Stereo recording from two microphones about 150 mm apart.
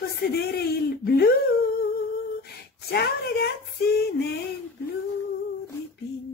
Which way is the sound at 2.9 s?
90° left.